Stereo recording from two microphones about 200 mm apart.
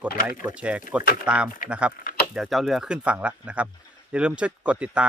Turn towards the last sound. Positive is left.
turn(degrees=-5)  # may be behind; listen again after turning